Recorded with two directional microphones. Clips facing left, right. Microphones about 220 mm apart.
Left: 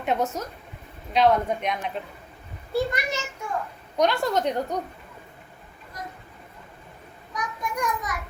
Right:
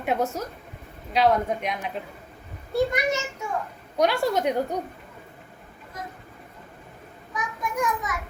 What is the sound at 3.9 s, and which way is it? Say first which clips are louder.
Speech: even; 5° right (ahead or behind).